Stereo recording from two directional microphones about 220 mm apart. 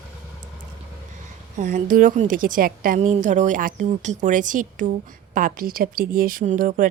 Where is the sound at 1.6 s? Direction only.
35° right (ahead or behind).